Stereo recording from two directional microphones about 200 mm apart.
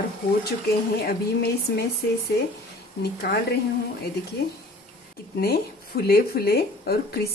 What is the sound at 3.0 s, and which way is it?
Speech, 50° left (ahead or behind).